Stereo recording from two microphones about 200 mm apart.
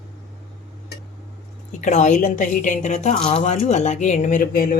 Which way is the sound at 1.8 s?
35° left (ahead or behind).